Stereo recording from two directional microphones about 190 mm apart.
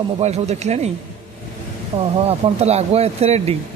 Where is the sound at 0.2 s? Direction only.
35° right (ahead or behind).